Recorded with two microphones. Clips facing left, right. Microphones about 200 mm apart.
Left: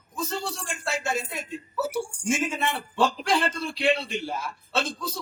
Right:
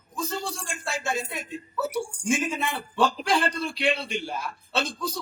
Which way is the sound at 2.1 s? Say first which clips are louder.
Right 1 dB; 5° left (ahead or behind).